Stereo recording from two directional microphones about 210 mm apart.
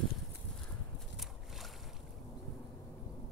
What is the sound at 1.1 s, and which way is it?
Boat, centre (ahead or behind).